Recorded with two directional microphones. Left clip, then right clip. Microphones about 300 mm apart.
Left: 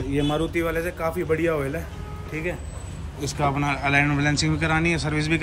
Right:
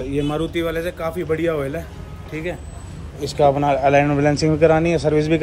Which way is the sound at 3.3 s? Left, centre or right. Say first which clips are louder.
Right 8 dB; centre.